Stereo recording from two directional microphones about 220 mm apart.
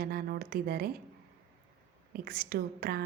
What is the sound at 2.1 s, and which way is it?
Speech, 40° right (ahead or behind).